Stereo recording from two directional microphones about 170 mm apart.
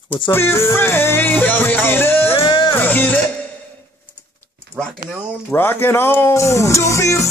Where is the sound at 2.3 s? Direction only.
30° left (ahead or behind).